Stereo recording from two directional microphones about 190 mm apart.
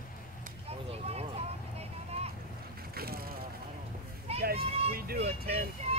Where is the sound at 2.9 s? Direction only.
55° right (ahead or behind).